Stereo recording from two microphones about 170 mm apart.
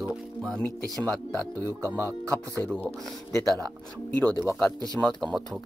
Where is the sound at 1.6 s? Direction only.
15° right (ahead or behind).